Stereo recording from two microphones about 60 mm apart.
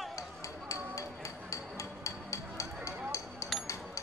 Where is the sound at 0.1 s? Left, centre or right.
Left.